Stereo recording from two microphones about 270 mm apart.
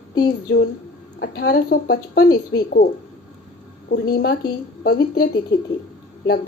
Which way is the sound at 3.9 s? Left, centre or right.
Left.